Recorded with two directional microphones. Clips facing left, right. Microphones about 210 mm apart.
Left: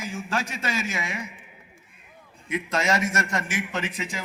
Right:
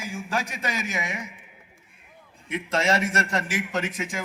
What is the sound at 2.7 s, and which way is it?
A man's voice, 30° right (ahead or behind).